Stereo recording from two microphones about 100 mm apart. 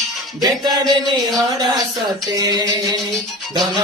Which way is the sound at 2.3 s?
45° right (ahead or behind).